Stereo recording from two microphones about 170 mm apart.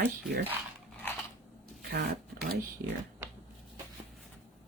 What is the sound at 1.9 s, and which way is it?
Speech, 65° right (ahead or behind).